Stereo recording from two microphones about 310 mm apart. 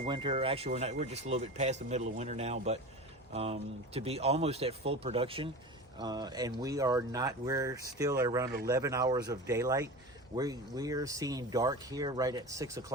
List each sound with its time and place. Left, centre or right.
0.0 s speech: centre